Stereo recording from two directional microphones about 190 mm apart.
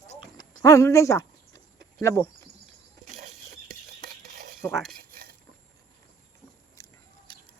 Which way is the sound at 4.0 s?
55° right (ahead or behind).